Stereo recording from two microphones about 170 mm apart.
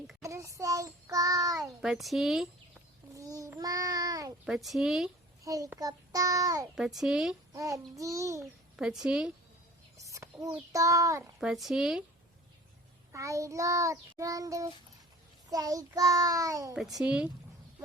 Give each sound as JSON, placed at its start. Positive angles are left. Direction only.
{"t": 0.2, "sound": "child singing", "side_deg": -20}
{"t": 1.6, "sound": "speech", "side_deg": 0}
{"t": 3.2, "sound": "child singing", "side_deg": -20}
{"t": 4.4, "sound": "speech", "side_deg": 0}
{"t": 5.5, "sound": "child singing", "side_deg": -20}
{"t": 6.7, "sound": "speech", "side_deg": 0}
{"t": 7.5, "sound": "child singing", "side_deg": -20}
{"t": 8.7, "sound": "a woman's voice", "side_deg": -5}
{"t": 10.0, "sound": "a sound", "side_deg": -20}
{"t": 10.7, "sound": "child singing", "side_deg": -20}
{"t": 11.3, "sound": "speech", "side_deg": 0}
{"t": 13.1, "sound": "child singing", "side_deg": -20}
{"t": 16.7, "sound": "speech", "side_deg": 0}